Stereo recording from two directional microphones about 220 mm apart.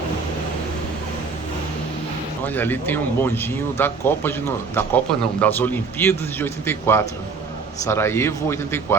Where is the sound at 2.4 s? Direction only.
10° left (ahead or behind).